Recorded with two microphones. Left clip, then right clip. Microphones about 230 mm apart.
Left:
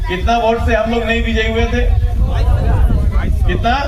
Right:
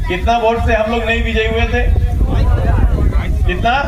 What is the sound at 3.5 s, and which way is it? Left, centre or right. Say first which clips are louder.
Speech: right 1 dB; left.